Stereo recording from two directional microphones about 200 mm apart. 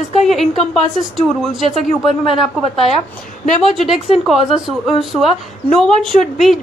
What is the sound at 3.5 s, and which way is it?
A woman's voice, centre (ahead or behind).